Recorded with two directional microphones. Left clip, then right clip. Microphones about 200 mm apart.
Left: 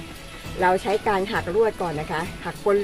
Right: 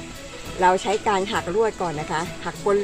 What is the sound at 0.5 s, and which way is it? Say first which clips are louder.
Speech: right 2 dB; 15° right (ahead or behind).